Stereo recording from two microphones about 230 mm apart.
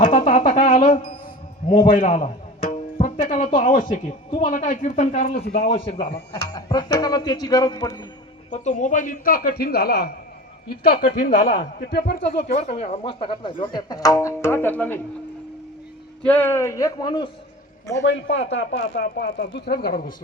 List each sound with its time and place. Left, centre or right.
0.2 s a sound: left
1.7 s speech: left
2.0 s music: left
3.8 s a man's voice: left; by 8.0 s centre
8.4 s a man's voice: left
12.2 s speech: left; by 15.0 s centre
16.2 s speech: centre
18.0 s speech: left